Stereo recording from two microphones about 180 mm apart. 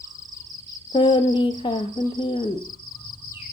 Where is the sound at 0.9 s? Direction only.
25° left (ahead or behind).